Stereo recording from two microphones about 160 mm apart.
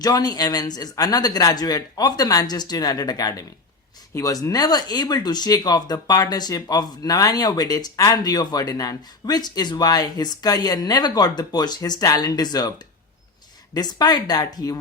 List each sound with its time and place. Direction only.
0.0 s speech: 25° left (ahead or behind)
13.7 s speech: 25° left (ahead or behind)